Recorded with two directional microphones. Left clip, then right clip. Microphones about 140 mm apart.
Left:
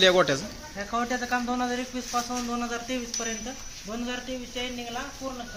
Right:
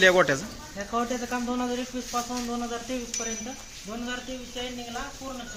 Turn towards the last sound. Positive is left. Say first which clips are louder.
# left 2 dB
turn(degrees=30)  # may be behind; listen again after turning